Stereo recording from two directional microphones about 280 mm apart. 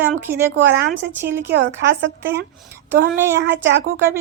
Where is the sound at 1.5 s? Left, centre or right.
Right.